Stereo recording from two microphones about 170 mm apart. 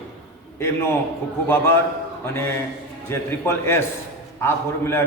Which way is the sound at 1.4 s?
15° left (ahead or behind).